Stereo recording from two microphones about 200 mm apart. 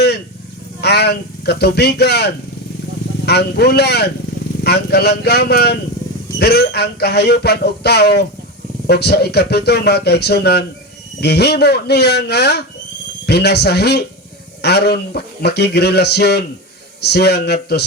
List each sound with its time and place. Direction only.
0.8 s speech: 55° left (ahead or behind)